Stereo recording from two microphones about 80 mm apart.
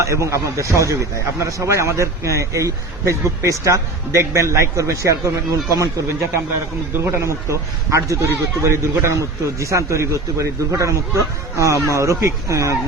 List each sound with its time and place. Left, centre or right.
0.0 s a man's voice: right